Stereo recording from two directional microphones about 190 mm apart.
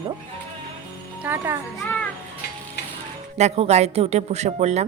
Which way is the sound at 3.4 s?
35° right (ahead or behind).